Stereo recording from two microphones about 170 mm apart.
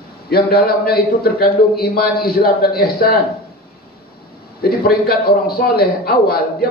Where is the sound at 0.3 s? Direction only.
65° left (ahead or behind).